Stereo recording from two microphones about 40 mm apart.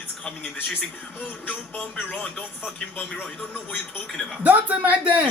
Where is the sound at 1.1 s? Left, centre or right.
Left.